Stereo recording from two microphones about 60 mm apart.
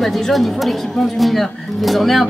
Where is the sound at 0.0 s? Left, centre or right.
Centre.